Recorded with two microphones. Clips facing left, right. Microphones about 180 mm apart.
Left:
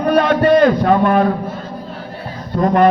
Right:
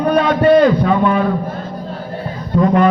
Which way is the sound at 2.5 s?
45° left (ahead or behind).